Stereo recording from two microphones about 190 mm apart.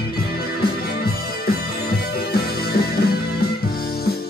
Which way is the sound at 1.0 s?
55° left (ahead or behind).